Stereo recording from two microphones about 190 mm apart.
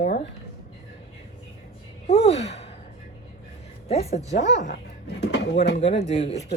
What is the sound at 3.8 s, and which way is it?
Speech, 35° left (ahead or behind).